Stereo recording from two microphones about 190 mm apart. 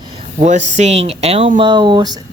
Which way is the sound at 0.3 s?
40° right (ahead or behind).